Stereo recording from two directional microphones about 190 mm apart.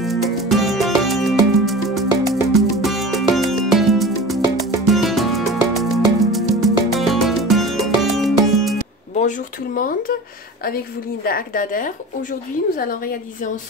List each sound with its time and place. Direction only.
0.0 s music: centre (ahead or behind)
9.8 s a woman's voice: 45° left (ahead or behind)
11.2 s a woman's voice: 45° left (ahead or behind)